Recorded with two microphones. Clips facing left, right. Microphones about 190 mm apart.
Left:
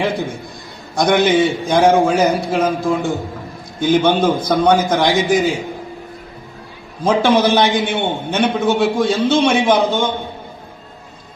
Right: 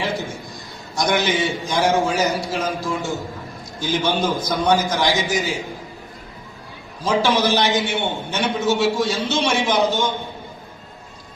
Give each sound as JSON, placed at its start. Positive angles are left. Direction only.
{"t": 0.0, "sound": "a sound", "side_deg": 55}
{"t": 0.9, "sound": "a man's voice", "side_deg": 55}
{"t": 7.0, "sound": "a man's voice", "side_deg": 55}